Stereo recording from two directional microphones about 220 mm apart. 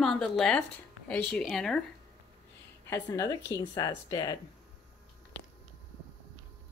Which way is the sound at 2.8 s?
15° left (ahead or behind).